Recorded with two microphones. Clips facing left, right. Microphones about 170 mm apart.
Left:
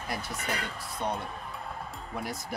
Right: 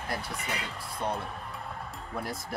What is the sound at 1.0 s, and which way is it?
Music, centre (ahead or behind).